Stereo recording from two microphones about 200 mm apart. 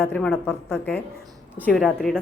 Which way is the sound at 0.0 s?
5° left (ahead or behind).